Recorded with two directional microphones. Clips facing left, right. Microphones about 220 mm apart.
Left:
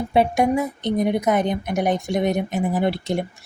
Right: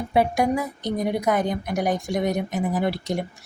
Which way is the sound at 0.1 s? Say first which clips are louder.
Left 2 dB; 25° left (ahead or behind).